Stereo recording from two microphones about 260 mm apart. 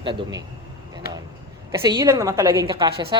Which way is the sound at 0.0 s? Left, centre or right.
Centre.